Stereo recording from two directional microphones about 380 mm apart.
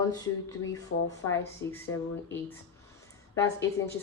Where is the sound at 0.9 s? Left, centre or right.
Left.